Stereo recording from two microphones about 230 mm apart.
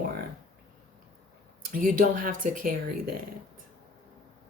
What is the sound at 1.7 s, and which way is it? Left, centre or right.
Speech, right.